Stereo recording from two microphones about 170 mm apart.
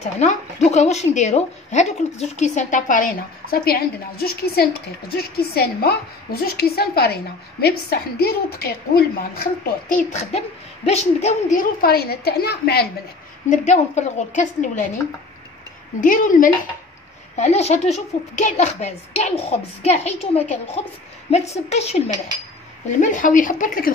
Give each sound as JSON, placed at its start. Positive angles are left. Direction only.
{"t": 0.0, "sound": "a woman's voice", "side_deg": 40}
{"t": 10.9, "sound": "speech", "side_deg": 40}
{"t": 11.8, "sound": "a woman's voice", "side_deg": 65}
{"t": 13.5, "sound": "speech", "side_deg": 45}
{"t": 16.0, "sound": "speech", "side_deg": 50}
{"t": 17.4, "sound": "speech", "side_deg": 40}